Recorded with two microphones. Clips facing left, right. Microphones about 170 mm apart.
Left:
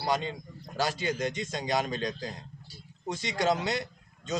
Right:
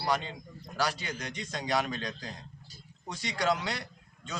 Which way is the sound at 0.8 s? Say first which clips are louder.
Left 4 dB; 25° left (ahead or behind).